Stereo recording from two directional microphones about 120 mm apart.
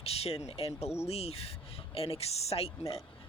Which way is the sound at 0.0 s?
55° left (ahead or behind).